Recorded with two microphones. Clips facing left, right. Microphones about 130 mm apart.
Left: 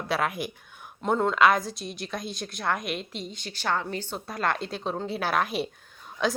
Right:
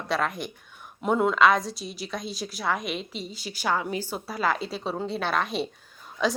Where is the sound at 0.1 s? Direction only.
5° left (ahead or behind).